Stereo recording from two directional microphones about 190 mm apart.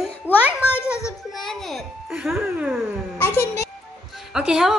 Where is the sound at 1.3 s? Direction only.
Centre (ahead or behind).